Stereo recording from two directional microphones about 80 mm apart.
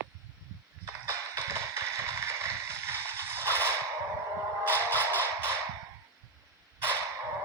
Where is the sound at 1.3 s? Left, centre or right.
Right.